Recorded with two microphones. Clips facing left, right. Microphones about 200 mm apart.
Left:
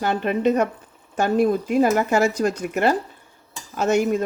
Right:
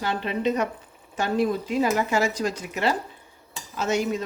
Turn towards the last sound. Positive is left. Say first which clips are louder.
# left 5 dB
turn(degrees=50)  # may be behind; listen again after turning